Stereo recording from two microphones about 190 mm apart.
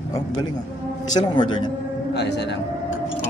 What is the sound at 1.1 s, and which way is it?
Speech, 20° left (ahead or behind).